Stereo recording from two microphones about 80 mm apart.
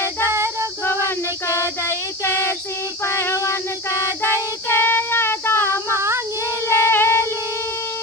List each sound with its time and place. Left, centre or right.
0.3 s child singing: right
1.0 s child singing: left
3.2 s a sound: left
4.7 s child singing: left
6.7 s music: left